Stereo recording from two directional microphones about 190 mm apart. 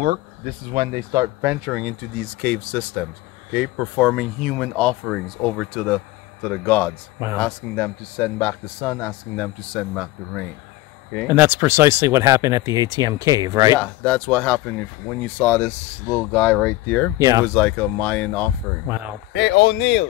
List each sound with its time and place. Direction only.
0.7 s speech: 25° right (ahead or behind); by 2.0 s 5° right (ahead or behind)
2.4 s a man's voice: 10° left (ahead or behind)
11.2 s speech: 10° right (ahead or behind)
13.7 s a man's voice: 5° left (ahead or behind)
17.2 s speech: 20° right (ahead or behind)
17.6 s a man's voice: 10° left (ahead or behind)
19.3 s speech: 70° left (ahead or behind)